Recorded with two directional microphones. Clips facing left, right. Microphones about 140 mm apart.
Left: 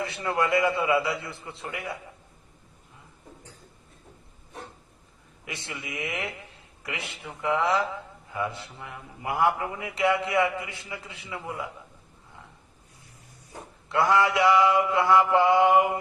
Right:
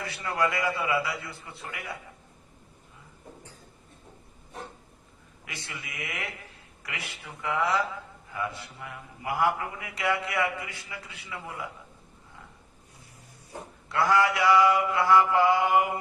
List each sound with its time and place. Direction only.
0.0 s a man's voice: 25° left (ahead or behind)
5.5 s a man's voice: 25° left (ahead or behind)
13.9 s a man's voice: 20° left (ahead or behind)